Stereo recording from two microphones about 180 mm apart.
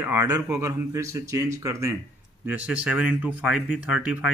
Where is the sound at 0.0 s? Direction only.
10° right (ahead or behind).